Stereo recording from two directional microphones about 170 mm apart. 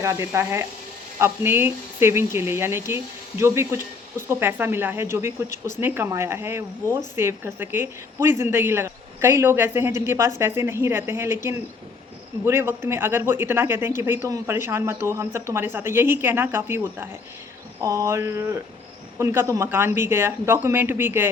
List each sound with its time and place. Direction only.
0.0 s speech: 15° right (ahead or behind)
12.5 s speech: 15° right (ahead or behind)